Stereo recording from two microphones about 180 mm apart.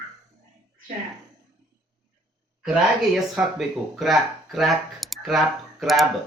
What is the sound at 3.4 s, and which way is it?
Speech, centre (ahead or behind).